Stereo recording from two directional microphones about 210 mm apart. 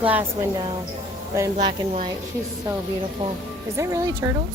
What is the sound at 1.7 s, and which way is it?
Speech, 35° right (ahead or behind).